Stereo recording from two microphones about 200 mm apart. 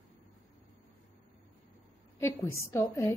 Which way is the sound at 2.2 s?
10° left (ahead or behind).